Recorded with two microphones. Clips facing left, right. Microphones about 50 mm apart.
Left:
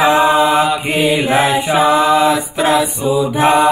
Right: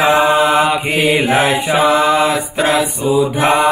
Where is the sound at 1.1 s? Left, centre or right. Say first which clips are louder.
Right 1 dB; right.